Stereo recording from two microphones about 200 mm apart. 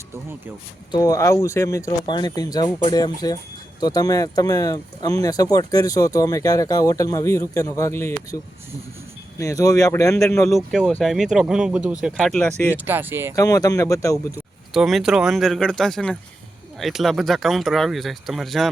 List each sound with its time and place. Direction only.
0.9 s speech: 20° left (ahead or behind)
9.4 s speech: 15° left (ahead or behind)
10.4 s speech: centre (ahead or behind)
12.7 s speech: 10° right (ahead or behind)
13.3 s speech: 15° left (ahead or behind)
14.3 s speech: 5° right (ahead or behind)